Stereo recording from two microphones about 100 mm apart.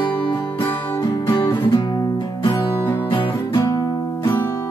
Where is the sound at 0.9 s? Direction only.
25° left (ahead or behind).